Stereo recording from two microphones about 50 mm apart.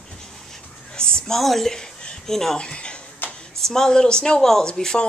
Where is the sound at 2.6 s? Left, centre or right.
Centre.